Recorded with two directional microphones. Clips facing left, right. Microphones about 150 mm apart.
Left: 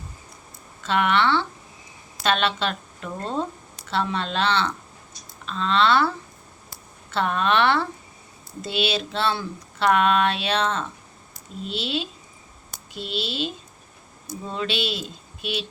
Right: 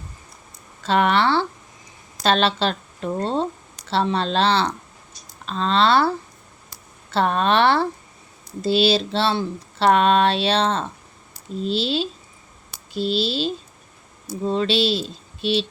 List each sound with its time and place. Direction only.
0.8 s speech: 35° right (ahead or behind)